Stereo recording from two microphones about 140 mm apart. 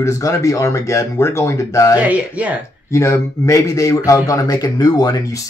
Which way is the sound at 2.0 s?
10° right (ahead or behind).